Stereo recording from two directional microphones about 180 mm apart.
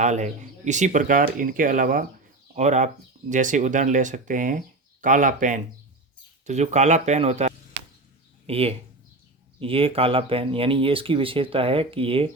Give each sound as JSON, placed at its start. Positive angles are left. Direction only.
{"t": 0.0, "sound": "speech", "side_deg": -40}